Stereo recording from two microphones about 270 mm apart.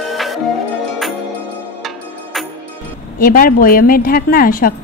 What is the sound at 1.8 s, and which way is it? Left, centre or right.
Music, centre.